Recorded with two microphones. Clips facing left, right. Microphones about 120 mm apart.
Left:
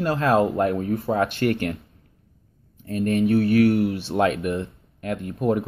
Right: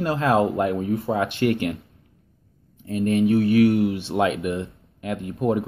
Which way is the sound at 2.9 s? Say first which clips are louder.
Right 1 dB; 20° right (ahead or behind).